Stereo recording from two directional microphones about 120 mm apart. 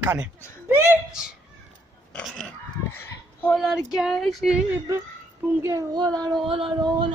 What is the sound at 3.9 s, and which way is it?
Speech, centre (ahead or behind).